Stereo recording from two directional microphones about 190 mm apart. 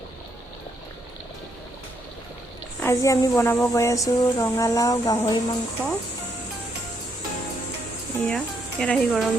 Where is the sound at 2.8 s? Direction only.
15° left (ahead or behind).